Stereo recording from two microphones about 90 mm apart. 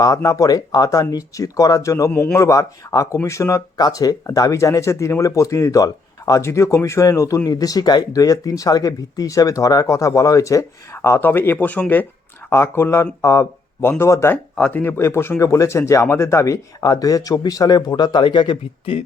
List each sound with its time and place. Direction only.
0.0 s speech: 40° left (ahead or behind)
3.8 s speech: 45° left (ahead or behind); by 12.0 s 20° left (ahead or behind)
12.5 s speech: 30° left (ahead or behind)
14.5 s speech: 15° left (ahead or behind); by 16.6 s 35° left (ahead or behind)
16.8 s a man's voice: 45° left (ahead or behind); by 19.0 s 80° left